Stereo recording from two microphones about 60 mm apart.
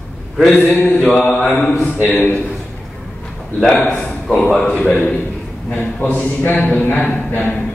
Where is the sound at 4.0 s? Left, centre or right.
Centre.